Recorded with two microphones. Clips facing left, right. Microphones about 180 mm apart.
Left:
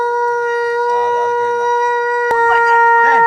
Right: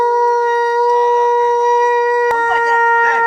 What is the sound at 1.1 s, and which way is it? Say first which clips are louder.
Shofar: right 3 dB; 40° left (ahead or behind).